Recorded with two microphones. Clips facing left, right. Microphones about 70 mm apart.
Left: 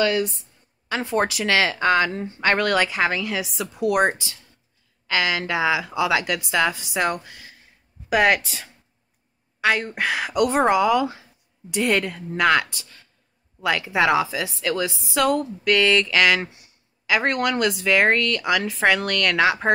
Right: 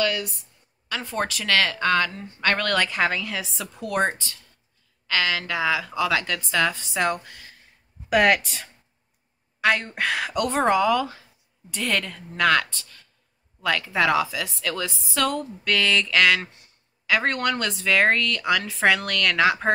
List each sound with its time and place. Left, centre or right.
0.0 s a woman's voice: left; by 19.7 s centre